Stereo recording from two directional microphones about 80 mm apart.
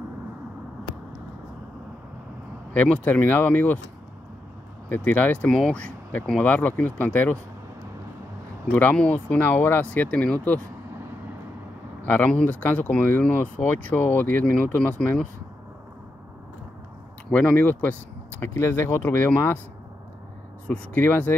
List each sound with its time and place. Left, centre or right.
2.7 s speech: centre
4.8 s speech: centre
8.9 s speech: centre
12.0 s speech: left
17.3 s speech: centre
20.6 s speech: left